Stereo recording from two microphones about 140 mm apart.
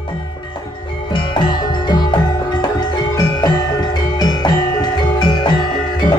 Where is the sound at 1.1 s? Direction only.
35° left (ahead or behind).